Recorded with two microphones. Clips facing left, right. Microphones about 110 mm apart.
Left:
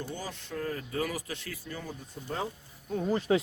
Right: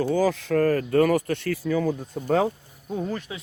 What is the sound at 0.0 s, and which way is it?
Speech, 90° right.